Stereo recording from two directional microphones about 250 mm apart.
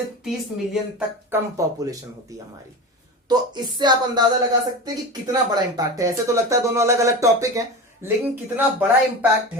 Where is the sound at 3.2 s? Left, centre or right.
Centre.